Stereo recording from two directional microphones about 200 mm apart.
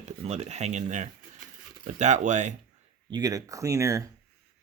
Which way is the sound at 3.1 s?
20° right (ahead or behind).